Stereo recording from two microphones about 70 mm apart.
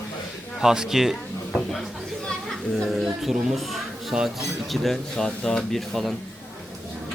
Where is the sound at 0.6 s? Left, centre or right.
Centre.